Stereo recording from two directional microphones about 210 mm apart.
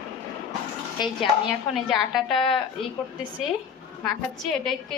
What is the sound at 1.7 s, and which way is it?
Speech, centre (ahead or behind).